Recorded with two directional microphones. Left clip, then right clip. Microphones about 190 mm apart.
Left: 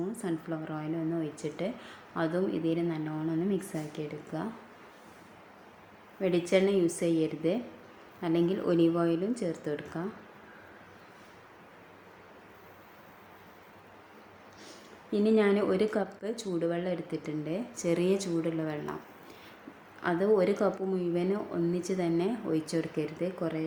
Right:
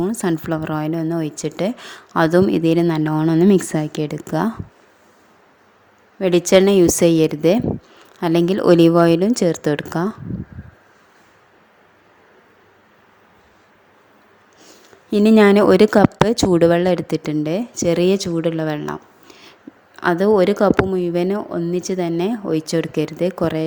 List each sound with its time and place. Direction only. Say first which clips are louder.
0.0 s speech: right 14 dB; 65° right (ahead or behind)
6.1 s speech: right 13 dB; 60° right (ahead or behind)
15.1 s speech: right 13 dB; 60° right (ahead or behind)